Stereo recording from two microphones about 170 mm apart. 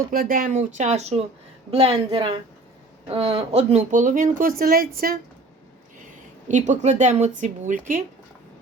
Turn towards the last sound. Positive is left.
turn(degrees=-50)  # may be behind; listen again after turning